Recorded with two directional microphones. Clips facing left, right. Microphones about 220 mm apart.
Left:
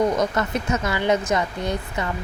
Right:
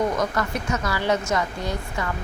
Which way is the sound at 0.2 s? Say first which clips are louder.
Left 2 dB; 20° left (ahead or behind).